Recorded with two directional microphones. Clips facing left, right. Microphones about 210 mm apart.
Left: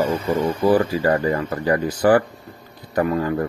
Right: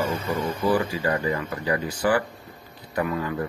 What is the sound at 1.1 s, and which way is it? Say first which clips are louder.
Speech: left 6 dB; 55° left (ahead or behind).